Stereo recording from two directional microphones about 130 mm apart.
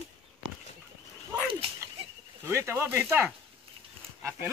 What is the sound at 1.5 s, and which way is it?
Dog, 45° right (ahead or behind).